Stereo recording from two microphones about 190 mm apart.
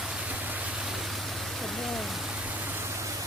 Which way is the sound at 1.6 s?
Centre (ahead or behind).